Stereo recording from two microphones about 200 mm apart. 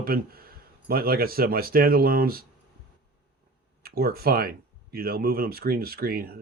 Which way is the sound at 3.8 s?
50° right (ahead or behind).